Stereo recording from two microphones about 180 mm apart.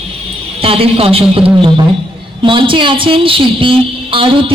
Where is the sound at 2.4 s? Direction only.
30° right (ahead or behind).